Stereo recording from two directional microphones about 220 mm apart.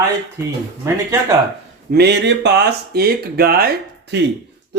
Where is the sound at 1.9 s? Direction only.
50° right (ahead or behind).